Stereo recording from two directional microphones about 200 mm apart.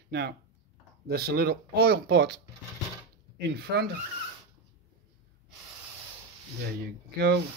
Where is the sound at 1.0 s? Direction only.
50° right (ahead or behind).